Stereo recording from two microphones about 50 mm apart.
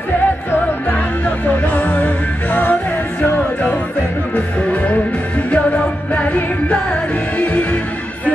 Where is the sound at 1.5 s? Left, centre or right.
Left.